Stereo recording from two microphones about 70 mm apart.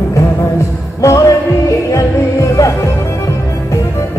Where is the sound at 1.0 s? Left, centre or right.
Left.